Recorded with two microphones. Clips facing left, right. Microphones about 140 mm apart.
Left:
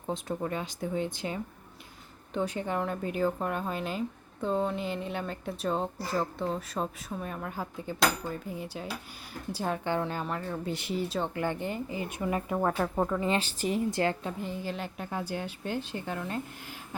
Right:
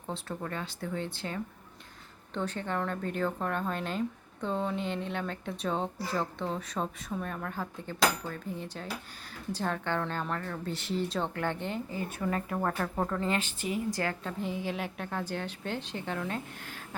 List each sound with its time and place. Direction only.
0.1 s a woman's voice: 15° left (ahead or behind)
13.4 s a woman's voice: 35° left (ahead or behind)
13.9 s a woman's voice: 25° left (ahead or behind)
14.4 s speech: centre (ahead or behind)